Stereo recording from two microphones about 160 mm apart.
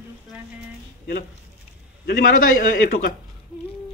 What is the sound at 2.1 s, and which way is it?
A man's voice, 65° left (ahead or behind).